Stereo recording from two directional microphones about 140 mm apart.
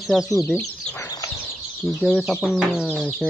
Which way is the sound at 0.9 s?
25° left (ahead or behind).